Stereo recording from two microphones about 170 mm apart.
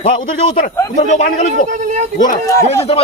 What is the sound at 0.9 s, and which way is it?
Speech, 45° left (ahead or behind).